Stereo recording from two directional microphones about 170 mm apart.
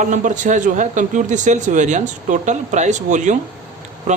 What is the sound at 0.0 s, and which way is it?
A man's voice, 50° right (ahead or behind).